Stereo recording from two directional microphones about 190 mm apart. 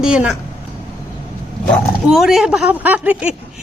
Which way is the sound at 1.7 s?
Centre (ahead or behind).